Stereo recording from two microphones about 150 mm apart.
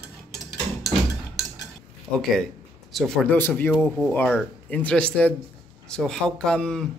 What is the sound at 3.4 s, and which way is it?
Speech, 15° left (ahead or behind).